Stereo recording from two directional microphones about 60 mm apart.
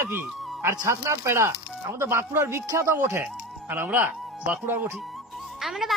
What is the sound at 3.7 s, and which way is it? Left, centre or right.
Speech, right.